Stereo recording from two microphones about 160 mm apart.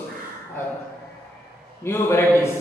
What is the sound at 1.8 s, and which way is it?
Speech, 15° left (ahead or behind).